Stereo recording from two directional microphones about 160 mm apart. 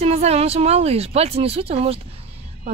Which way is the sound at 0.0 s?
40° right (ahead or behind).